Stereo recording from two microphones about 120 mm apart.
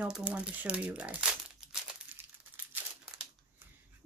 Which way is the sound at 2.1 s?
15° right (ahead or behind).